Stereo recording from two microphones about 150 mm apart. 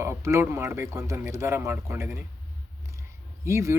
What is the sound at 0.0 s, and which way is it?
Speech, 20° right (ahead or behind).